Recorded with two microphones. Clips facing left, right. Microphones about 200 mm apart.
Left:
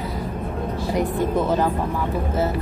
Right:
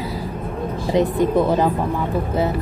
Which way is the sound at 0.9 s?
20° right (ahead or behind).